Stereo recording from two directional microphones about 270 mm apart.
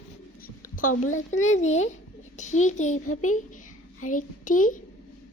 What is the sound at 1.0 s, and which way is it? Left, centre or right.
Speech, left.